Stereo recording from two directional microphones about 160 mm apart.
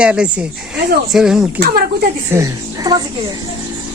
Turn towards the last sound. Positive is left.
turn(degrees=-25)  # may be behind; listen again after turning